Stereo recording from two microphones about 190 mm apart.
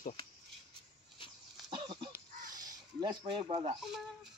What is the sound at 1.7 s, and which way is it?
Cough, 25° right (ahead or behind).